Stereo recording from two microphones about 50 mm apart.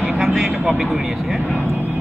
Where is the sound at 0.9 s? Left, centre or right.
Centre.